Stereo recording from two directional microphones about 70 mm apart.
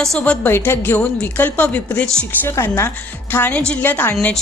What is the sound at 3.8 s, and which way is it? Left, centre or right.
Speech, left.